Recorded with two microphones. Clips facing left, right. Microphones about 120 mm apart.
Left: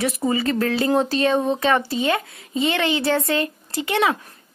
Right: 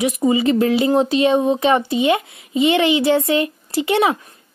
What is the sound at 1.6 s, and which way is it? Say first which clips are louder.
A woman's voice: right 4 dB; 20° right (ahead or behind).